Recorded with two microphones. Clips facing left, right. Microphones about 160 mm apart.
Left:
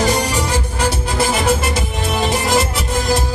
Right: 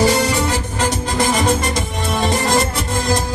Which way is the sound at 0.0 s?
10° left (ahead or behind).